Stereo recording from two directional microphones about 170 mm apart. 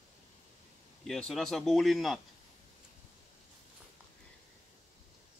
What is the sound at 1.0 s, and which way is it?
Speech, 5° left (ahead or behind).